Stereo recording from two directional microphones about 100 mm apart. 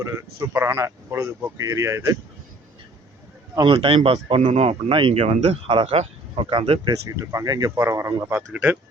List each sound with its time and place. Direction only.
0.0 s speech: 30° right (ahead or behind)
3.7 s speech: 65° right (ahead or behind)
7.2 s speech: 35° right (ahead or behind)
7.8 s speech: 25° right (ahead or behind)